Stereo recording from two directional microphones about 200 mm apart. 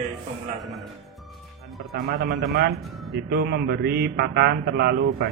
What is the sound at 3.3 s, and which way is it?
Mantra, 50° right (ahead or behind).